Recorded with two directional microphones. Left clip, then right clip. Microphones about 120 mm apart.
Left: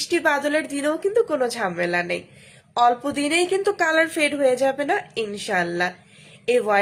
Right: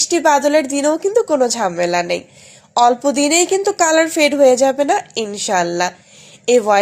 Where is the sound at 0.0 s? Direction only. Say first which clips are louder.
Right 8 dB; 35° right (ahead or behind).